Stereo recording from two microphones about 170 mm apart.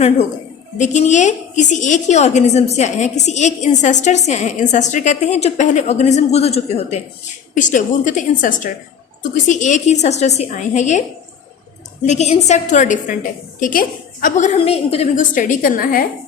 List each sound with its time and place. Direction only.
0.8 s a woman's voice: 45° left (ahead or behind)
7.5 s a woman's voice: 50° left (ahead or behind)
12.0 s a woman's voice: 40° left (ahead or behind); by 16.0 s 60° left (ahead or behind)